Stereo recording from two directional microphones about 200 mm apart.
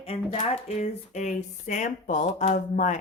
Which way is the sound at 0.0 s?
30° left (ahead or behind).